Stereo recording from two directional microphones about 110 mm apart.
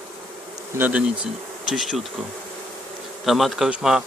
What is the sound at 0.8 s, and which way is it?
Speech, 10° right (ahead or behind).